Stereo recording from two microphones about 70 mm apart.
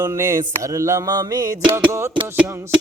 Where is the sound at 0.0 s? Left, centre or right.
Right.